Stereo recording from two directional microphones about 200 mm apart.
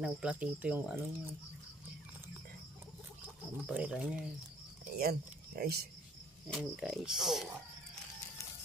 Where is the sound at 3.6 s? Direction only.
5° right (ahead or behind).